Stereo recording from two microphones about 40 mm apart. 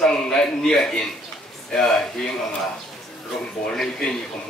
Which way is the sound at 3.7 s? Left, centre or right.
Centre.